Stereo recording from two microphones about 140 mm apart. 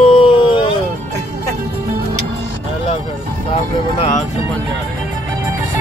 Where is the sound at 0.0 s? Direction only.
40° left (ahead or behind).